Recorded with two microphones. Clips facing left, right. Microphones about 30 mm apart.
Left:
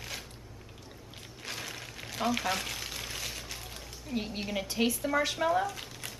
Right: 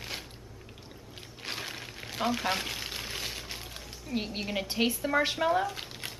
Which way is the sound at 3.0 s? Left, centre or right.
Centre.